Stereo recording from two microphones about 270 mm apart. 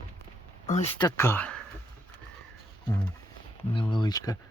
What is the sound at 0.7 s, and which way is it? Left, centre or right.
Speech, left.